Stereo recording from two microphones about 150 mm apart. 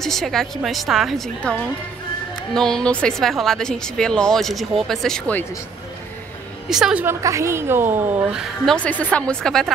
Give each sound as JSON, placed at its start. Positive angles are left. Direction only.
{"t": 0.0, "sound": "a woman's voice", "side_deg": 0}
{"t": 6.7, "sound": "a woman's voice", "side_deg": -5}
{"t": 7.2, "sound": "a woman's voice", "side_deg": -20}
{"t": 8.7, "sound": "speech", "side_deg": 10}